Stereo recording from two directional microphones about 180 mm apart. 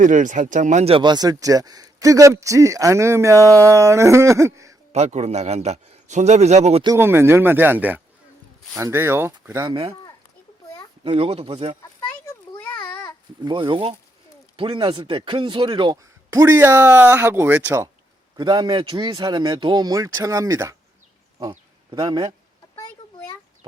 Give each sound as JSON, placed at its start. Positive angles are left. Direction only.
{"t": 0.0, "sound": "speech", "side_deg": -45}
{"t": 4.9, "sound": "a man's voice", "side_deg": -40}
{"t": 6.8, "sound": "speech", "side_deg": -15}
{"t": 11.0, "sound": "a man's voice", "side_deg": -30}
{"t": 12.2, "sound": "a sound", "side_deg": 10}
{"t": 13.4, "sound": "speech", "side_deg": -25}
{"t": 18.3, "sound": "speech", "side_deg": -25}
{"t": 21.3, "sound": "a sound", "side_deg": -20}